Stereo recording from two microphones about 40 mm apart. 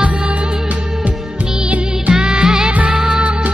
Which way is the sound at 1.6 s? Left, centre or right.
Right.